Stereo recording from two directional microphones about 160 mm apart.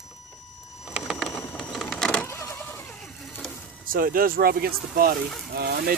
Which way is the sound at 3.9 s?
60° right (ahead or behind).